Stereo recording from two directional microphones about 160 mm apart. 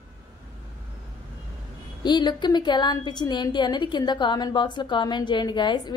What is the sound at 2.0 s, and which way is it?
A woman's voice, 25° left (ahead or behind).